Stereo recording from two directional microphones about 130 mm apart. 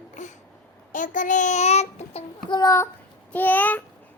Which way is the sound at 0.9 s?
80° left.